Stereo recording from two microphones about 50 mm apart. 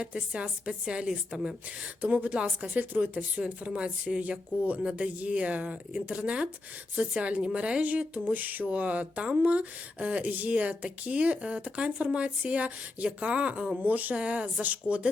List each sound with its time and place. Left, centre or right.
0.0 s speech: right
2.0 s speech: right
3.7 s speech: right